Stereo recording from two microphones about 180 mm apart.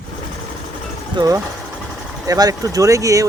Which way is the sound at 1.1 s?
20° right (ahead or behind).